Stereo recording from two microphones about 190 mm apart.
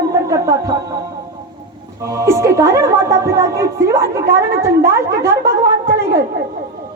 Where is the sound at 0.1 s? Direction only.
15° right (ahead or behind).